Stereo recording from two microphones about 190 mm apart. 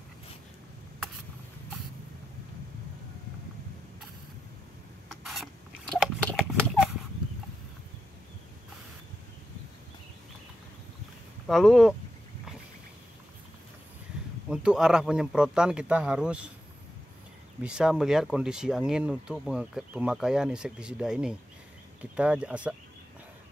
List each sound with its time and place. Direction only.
5.2 s rodents: centre (ahead or behind)
11.4 s speech: centre (ahead or behind)
14.5 s speech: 5° right (ahead or behind)
17.6 s speech: 5° right (ahead or behind)